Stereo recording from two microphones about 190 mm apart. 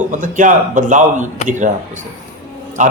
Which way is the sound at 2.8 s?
40° right (ahead or behind).